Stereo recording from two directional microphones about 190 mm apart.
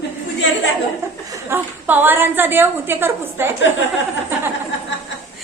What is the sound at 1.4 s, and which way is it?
A woman's voice, 10° right (ahead or behind).